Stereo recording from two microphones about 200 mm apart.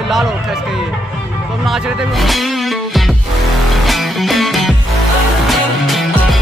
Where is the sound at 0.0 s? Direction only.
Centre (ahead or behind).